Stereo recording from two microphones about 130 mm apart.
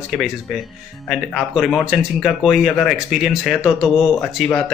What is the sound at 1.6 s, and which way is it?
Speech, centre (ahead or behind).